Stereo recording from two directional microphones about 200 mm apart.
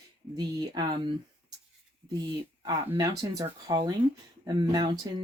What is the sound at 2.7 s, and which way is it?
Speech, 20° right (ahead or behind).